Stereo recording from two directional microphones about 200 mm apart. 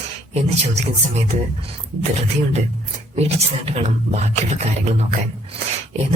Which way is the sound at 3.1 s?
30° right (ahead or behind).